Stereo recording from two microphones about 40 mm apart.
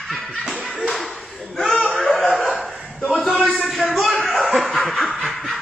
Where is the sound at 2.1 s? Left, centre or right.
Centre.